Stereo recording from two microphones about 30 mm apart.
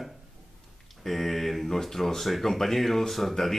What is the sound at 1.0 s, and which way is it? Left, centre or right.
Speech, centre.